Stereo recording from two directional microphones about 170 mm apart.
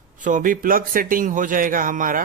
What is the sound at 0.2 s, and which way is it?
Speech, 50° right (ahead or behind).